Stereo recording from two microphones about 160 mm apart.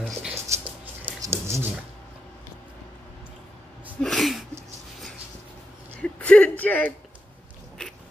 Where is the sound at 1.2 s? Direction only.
15° right (ahead or behind).